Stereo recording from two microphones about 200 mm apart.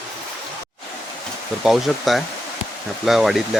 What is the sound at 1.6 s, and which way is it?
Speech, centre (ahead or behind).